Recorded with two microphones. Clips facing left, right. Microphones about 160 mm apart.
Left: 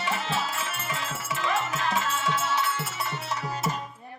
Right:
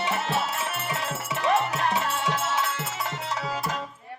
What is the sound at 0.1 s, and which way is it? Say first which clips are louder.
Music: right 2 dB; 65° right (ahead or behind).